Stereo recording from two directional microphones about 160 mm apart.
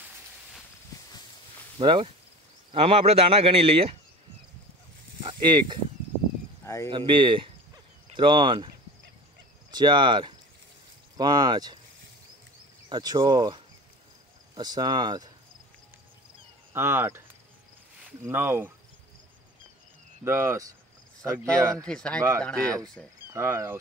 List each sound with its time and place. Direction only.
1.8 s speech: 30° right (ahead or behind)
5.2 s speech: 30° right (ahead or behind)
6.6 s a sound: 15° left (ahead or behind)
6.9 s speech: 30° right (ahead or behind)
9.7 s speech: 25° right (ahead or behind)
12.9 s speech: 25° right (ahead or behind)
16.7 s speech: 15° right (ahead or behind)
20.2 s speech: 15° right (ahead or behind)
21.8 s speech: 5° left (ahead or behind)
23.3 s speech: 15° right (ahead or behind)